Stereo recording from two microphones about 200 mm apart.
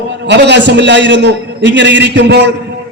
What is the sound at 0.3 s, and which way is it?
A man's voice, 60° right (ahead or behind).